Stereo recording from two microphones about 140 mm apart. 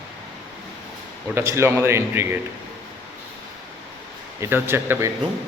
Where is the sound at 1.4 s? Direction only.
20° right (ahead or behind).